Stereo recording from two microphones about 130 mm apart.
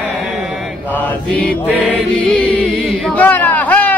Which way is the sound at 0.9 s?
10° left (ahead or behind).